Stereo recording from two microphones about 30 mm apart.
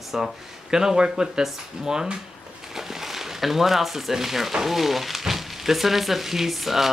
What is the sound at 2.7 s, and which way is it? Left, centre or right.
Speech, centre.